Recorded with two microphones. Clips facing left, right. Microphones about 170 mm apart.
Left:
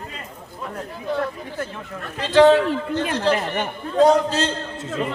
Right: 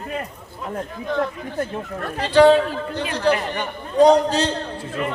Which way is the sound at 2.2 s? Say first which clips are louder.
Even; 15° right (ahead or behind).